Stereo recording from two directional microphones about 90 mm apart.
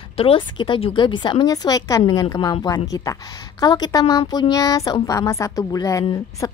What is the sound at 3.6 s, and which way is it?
A woman's voice, 50° left (ahead or behind).